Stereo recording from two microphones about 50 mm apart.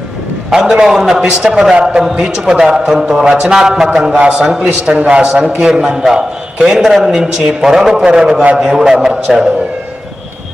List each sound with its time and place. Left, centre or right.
0.5 s a man's voice: centre
1.8 s a man's voice: right
2.0 s a man's voice: centre